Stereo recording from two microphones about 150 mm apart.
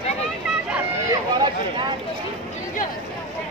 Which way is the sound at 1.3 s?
30° right (ahead or behind).